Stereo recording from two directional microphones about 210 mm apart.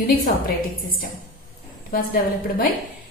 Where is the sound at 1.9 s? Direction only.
45° left (ahead or behind).